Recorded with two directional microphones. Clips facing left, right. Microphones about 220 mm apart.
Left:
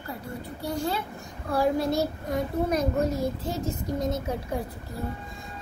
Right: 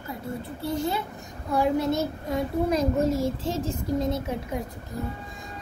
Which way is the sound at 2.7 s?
90° right.